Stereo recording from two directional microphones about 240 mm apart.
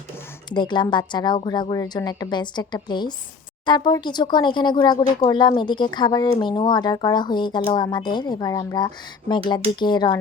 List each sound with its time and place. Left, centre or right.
0.5 s speech: centre